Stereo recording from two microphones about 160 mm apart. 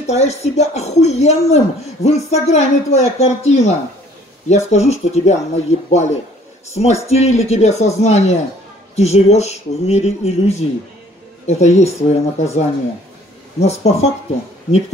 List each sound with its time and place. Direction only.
0.0 s speech: 45° left (ahead or behind)